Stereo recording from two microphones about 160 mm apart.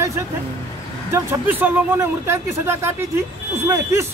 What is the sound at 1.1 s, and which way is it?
Speech, 15° right (ahead or behind).